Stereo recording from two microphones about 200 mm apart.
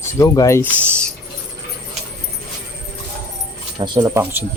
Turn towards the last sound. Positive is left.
turn(degrees=-10)  # may be behind; listen again after turning